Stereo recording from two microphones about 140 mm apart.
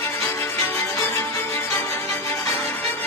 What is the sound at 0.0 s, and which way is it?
Music, 15° left (ahead or behind).